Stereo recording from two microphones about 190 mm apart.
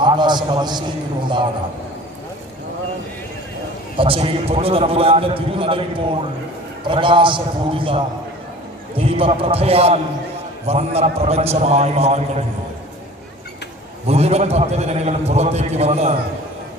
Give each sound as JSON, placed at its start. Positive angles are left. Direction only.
{"t": 0.0, "sound": "a sound", "side_deg": -25}
{"t": 3.9, "sound": "a man's voice", "side_deg": -30}
{"t": 14.1, "sound": "a man's voice", "side_deg": -35}